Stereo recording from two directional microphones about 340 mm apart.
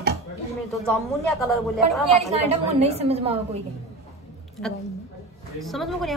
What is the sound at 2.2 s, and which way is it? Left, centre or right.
Speech, centre.